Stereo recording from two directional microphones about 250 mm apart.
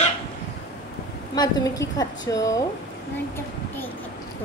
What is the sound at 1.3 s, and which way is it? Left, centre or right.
A woman's voice, centre.